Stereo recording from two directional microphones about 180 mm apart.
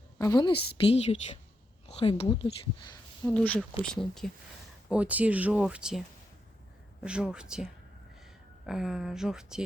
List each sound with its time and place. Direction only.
0.2 s speech: 20° left (ahead or behind)
0.9 s a woman's voice: 35° left (ahead or behind)
3.2 s speech: 5° left (ahead or behind)
7.0 s speech: 5° right (ahead or behind)